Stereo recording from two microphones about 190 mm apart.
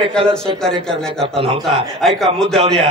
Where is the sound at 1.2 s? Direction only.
30° right (ahead or behind).